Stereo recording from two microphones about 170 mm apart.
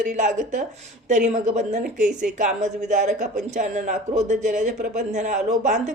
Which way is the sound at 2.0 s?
5° right (ahead or behind).